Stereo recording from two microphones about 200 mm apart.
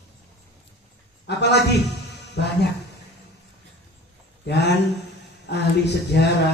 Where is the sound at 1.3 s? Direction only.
55° left (ahead or behind).